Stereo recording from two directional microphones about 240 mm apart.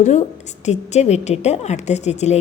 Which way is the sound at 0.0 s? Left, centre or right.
Left.